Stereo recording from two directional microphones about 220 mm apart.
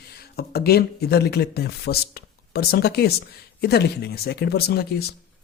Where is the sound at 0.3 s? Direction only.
45° left (ahead or behind).